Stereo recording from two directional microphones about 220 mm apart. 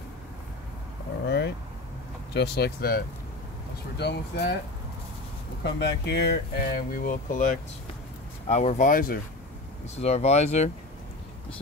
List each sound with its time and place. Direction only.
1.2 s vehicle: 50° left (ahead or behind)
2.3 s speech: 50° left (ahead or behind)
5.6 s speech: 50° left (ahead or behind)
9.9 s speech: 30° left (ahead or behind)